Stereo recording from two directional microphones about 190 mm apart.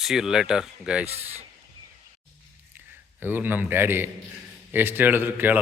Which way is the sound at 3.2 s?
10° right (ahead or behind).